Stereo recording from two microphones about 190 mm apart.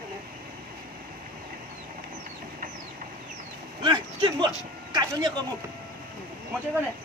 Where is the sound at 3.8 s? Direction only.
25° right (ahead or behind).